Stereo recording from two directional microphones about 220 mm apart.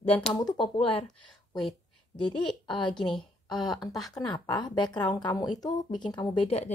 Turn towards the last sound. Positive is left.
turn(degrees=25)  # may be behind; listen again after turning